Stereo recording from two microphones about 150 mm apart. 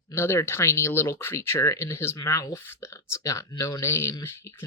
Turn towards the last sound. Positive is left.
turn(degrees=15)  # may be behind; listen again after turning